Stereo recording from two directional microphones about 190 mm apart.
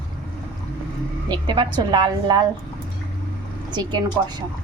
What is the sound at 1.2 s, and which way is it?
Speech, 25° right (ahead or behind).